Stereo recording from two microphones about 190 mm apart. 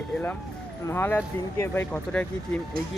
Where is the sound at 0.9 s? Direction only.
10° left (ahead or behind).